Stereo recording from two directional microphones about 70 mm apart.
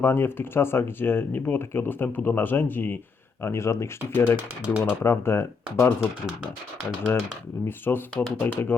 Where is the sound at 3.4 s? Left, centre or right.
Left.